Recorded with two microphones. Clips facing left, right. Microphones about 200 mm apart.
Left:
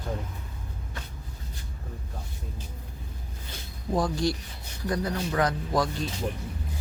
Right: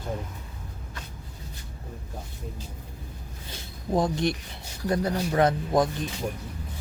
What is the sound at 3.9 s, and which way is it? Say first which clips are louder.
Speech: right 2 dB; 20° right (ahead or behind).